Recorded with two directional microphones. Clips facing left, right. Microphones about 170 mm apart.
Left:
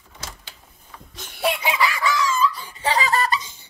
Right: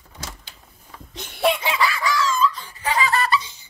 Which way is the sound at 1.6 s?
20° left (ahead or behind).